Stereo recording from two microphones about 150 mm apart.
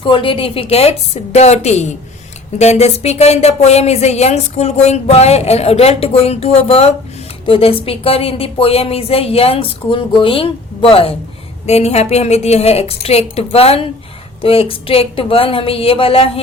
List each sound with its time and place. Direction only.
0.0 s a woman's voice: 35° left (ahead or behind)